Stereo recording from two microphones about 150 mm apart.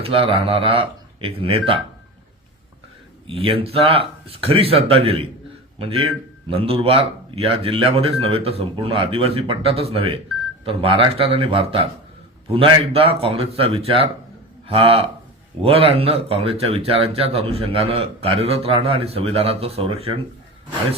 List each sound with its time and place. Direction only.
0.0 s speech: 40° right (ahead or behind)
3.2 s speech: 35° right (ahead or behind)